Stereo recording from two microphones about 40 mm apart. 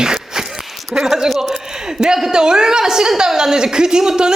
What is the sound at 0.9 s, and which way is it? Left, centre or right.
Speech, centre.